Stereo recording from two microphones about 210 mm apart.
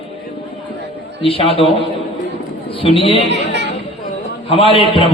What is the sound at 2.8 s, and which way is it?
Speech, 25° left (ahead or behind).